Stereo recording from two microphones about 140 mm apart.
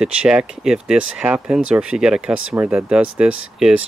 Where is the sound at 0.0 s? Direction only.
5° right (ahead or behind).